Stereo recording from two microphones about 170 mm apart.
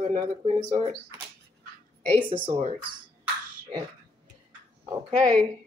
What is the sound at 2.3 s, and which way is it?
Speech, 30° right (ahead or behind).